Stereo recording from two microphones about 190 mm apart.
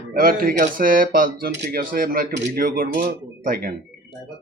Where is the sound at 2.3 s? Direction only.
60° right (ahead or behind).